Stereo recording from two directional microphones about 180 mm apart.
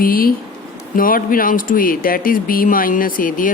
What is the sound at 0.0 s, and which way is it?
Speech, 55° left (ahead or behind).